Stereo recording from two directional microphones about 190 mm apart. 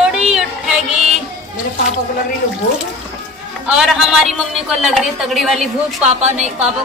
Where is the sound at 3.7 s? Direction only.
Centre (ahead or behind).